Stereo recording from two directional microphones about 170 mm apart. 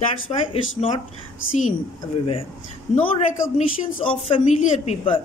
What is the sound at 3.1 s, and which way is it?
A woman's voice, 40° left (ahead or behind).